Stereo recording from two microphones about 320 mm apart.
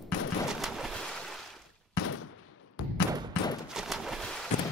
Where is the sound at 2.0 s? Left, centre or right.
Left.